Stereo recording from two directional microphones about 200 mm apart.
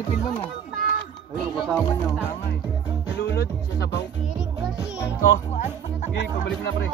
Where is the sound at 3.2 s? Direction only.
55° left (ahead or behind).